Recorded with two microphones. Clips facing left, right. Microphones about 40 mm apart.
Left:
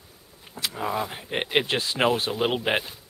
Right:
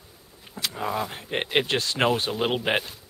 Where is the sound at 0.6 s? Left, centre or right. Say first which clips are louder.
Even; centre.